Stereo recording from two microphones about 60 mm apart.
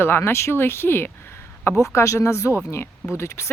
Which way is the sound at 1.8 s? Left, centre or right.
Left.